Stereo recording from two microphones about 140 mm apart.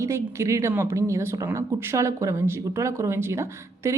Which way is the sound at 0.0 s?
20° right (ahead or behind).